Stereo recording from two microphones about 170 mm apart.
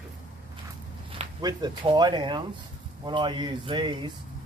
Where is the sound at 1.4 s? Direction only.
25° right (ahead or behind).